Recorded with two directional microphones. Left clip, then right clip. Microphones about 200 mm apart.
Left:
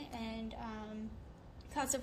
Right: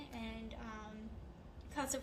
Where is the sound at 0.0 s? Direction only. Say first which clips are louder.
Left 4 dB; 45° left (ahead or behind).